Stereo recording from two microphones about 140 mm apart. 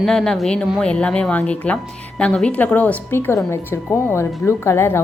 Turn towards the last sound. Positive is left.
turn(degrees=15)  # may be behind; listen again after turning